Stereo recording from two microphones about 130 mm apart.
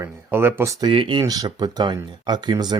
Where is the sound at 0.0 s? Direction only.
15° right (ahead or behind).